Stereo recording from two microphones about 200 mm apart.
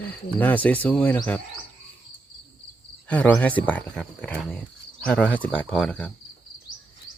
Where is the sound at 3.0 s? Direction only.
5° left (ahead or behind).